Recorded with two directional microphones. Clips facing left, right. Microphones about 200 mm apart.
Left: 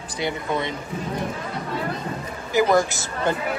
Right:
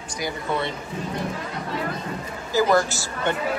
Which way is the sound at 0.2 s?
15° left (ahead or behind).